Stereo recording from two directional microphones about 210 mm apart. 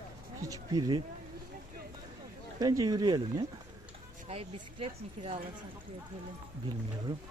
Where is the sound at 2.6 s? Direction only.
20° right (ahead or behind).